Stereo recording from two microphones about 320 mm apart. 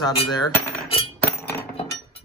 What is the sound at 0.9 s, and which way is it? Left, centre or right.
Chink, centre.